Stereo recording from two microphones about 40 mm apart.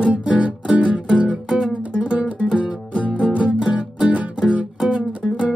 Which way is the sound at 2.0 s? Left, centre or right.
Right.